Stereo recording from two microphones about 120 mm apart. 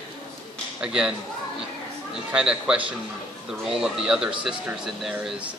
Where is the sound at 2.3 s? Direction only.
5° right (ahead or behind).